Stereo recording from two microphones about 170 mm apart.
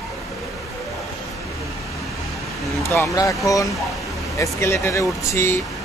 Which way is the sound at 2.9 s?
20° left (ahead or behind).